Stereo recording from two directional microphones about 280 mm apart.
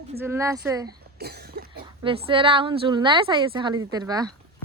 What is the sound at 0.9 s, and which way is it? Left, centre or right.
Cough, right.